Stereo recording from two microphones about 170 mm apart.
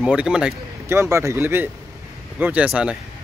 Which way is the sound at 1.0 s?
15° right (ahead or behind).